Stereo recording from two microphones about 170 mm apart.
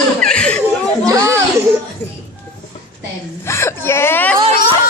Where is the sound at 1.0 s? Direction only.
20° right (ahead or behind).